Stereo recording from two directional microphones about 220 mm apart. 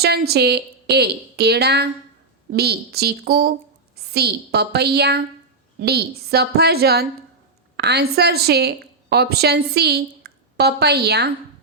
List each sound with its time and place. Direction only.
0.0 s a woman's voice: 45° right (ahead or behind)